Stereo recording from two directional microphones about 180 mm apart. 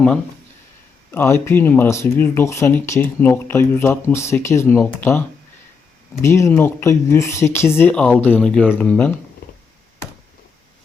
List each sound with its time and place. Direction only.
1.1 s speech: 15° left (ahead or behind)
6.2 s speech: 15° left (ahead or behind)